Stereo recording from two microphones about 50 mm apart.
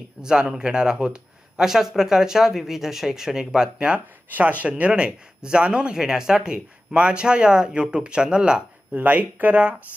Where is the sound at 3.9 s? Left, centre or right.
Right.